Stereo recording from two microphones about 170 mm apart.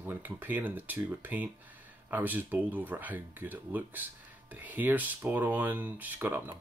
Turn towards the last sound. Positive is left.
turn(degrees=-10)  # may be behind; listen again after turning